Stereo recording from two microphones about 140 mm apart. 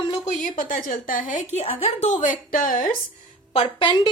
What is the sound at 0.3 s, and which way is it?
A woman's voice, 70° left (ahead or behind).